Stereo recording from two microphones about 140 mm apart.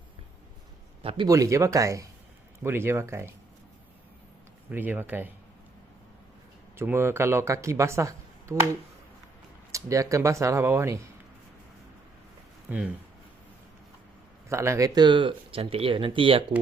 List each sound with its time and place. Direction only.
1.0 s speech: 35° right (ahead or behind)
1.3 s speech: 25° right (ahead or behind)
4.7 s speech: 15° right (ahead or behind)
6.7 s speech: 15° right (ahead or behind)
9.7 s speech: 25° right (ahead or behind)
14.5 s speech: 20° right (ahead or behind); by 16.4 s 40° right (ahead or behind)